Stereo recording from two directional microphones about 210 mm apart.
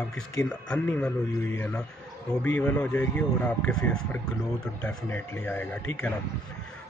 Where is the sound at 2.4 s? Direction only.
10° left (ahead or behind).